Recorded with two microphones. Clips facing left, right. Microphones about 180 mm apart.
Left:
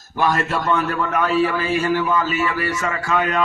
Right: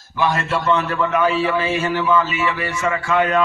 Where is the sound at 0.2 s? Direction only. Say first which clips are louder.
Even; 45° left (ahead or behind).